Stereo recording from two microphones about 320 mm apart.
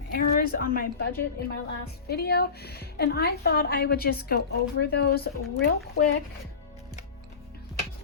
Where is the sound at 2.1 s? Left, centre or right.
Left.